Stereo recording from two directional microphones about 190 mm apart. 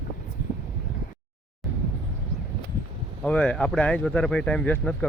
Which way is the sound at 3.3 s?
5° left (ahead or behind).